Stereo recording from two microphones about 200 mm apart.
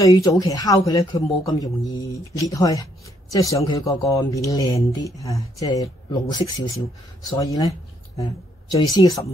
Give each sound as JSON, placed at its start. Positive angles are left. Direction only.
{"t": 0.0, "sound": "speech", "side_deg": 15}
{"t": 8.8, "sound": "speech", "side_deg": 20}